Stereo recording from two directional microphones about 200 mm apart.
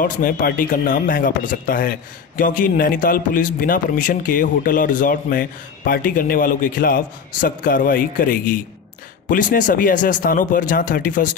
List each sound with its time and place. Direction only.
0.0 s a man's voice: 45° left (ahead or behind)